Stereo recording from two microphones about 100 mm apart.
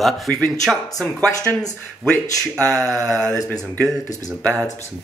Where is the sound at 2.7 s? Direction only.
5° left (ahead or behind).